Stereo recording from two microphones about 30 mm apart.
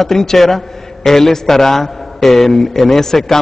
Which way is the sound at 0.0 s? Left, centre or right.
Centre.